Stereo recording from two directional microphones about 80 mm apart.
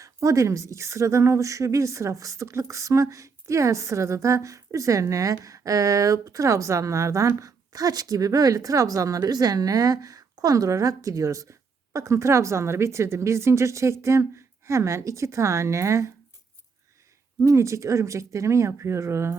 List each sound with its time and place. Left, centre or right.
0.0 s a woman's voice: right
17.4 s a woman's voice: right